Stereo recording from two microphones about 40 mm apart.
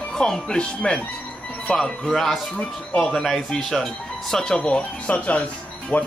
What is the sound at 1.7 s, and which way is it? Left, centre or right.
Speech, centre.